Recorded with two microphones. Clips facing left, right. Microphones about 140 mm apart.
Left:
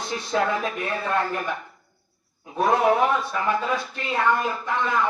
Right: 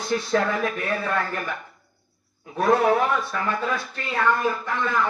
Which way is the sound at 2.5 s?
20° left (ahead or behind).